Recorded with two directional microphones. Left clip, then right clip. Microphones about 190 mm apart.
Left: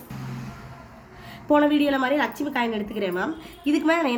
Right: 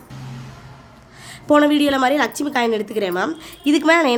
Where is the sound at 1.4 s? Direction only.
65° right (ahead or behind).